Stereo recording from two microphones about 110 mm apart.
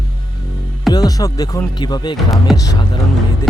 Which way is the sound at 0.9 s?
35° left (ahead or behind).